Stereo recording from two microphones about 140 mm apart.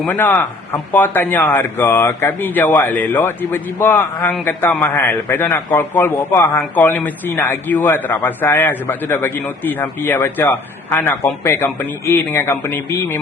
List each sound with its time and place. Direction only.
0.1 s a man's voice: 15° left (ahead or behind)